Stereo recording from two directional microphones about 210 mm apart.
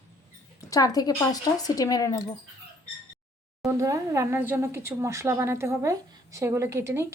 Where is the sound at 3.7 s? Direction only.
15° right (ahead or behind).